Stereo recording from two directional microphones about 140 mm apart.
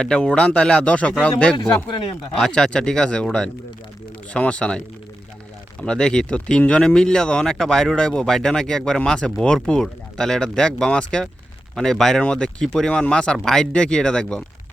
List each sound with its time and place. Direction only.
0.0 s speech: 5° left (ahead or behind)
1.9 s speech: 40° left (ahead or behind)
2.4 s speech: 5° left (ahead or behind)
5.8 s speech: 5° left (ahead or behind)